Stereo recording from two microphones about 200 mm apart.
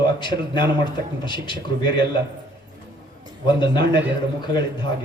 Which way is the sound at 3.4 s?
20° left (ahead or behind).